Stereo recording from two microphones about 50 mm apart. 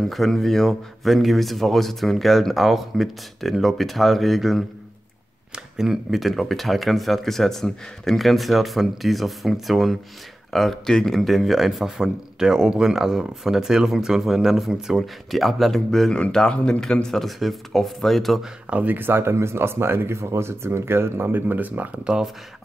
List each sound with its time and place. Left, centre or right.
0.1 s a man's voice: centre
16.1 s speech: centre
18.7 s speech: right
18.9 s speech: right
19.2 s speech: right
21.4 s speech: right